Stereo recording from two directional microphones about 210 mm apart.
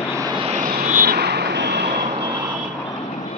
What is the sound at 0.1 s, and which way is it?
Vehicle, 20° right (ahead or behind).